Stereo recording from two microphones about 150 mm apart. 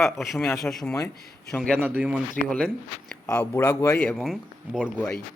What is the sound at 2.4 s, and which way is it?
Speech, 5° left (ahead or behind).